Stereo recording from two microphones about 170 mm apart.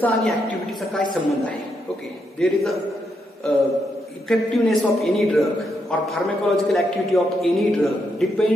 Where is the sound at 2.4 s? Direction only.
Centre (ahead or behind).